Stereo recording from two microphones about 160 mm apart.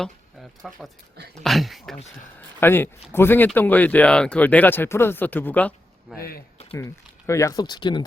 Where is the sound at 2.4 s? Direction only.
15° left (ahead or behind).